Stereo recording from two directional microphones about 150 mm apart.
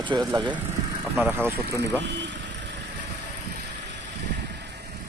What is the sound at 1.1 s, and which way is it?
Speech, 15° right (ahead or behind).